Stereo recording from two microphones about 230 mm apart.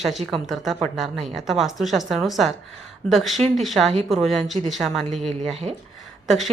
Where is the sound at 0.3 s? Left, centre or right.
Centre.